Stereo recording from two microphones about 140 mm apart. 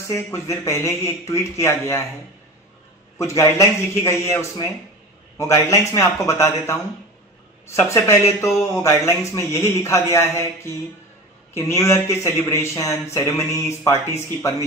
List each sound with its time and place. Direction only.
0.0 s speech: 20° left (ahead or behind)
3.2 s speech: 20° left (ahead or behind)